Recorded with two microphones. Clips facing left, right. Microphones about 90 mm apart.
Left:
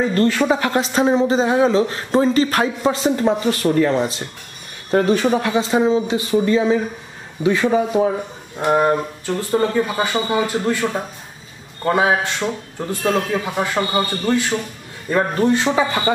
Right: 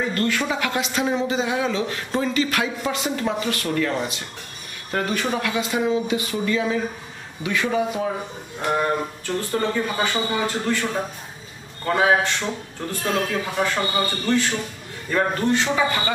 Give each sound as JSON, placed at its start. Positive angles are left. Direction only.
{"t": 0.1, "sound": "a man's voice", "side_deg": 30}
{"t": 8.5, "sound": "a man's voice", "side_deg": 25}